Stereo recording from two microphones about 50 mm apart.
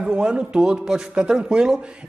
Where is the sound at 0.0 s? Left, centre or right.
Centre.